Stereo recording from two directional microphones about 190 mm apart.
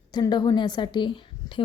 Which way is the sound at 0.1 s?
20° left (ahead or behind).